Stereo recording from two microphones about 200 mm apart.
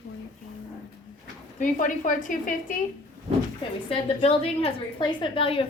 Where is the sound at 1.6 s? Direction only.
40° left (ahead or behind).